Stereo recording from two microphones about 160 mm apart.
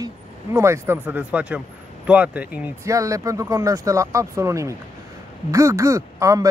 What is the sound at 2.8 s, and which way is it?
Speech, 20° right (ahead or behind).